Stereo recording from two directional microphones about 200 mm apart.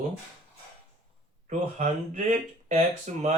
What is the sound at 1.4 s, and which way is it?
Speech, 40° right (ahead or behind).